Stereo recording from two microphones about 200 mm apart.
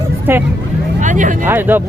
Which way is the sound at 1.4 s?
10° right (ahead or behind).